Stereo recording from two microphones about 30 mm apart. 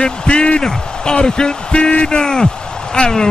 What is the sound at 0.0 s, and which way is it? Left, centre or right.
Speech, left.